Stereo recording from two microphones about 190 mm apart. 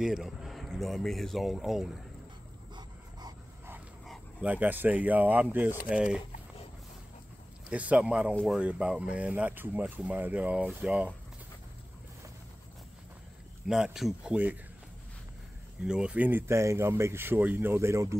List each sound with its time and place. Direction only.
0.0 s speech: centre (ahead or behind)
2.7 s dog: 20° right (ahead or behind)
3.7 s speech: centre (ahead or behind)
7.7 s speech: 5° right (ahead or behind)
13.7 s speech: 5° right (ahead or behind)
15.8 s speech: 5° right (ahead or behind)